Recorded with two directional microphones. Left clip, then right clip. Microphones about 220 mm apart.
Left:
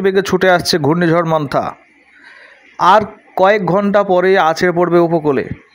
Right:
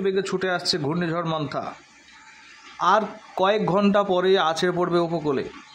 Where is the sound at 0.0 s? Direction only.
35° left (ahead or behind).